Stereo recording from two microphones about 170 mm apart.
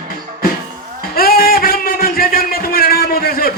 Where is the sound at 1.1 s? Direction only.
60° left (ahead or behind).